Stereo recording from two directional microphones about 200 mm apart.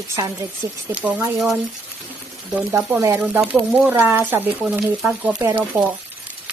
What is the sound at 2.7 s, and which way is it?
Speech, 15° right (ahead or behind).